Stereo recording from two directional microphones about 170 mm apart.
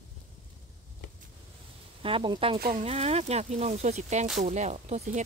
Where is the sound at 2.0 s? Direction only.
30° right (ahead or behind).